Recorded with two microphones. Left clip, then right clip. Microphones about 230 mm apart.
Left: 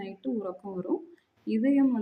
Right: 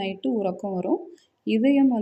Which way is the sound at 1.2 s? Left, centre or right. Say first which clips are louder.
Right 6 dB; centre.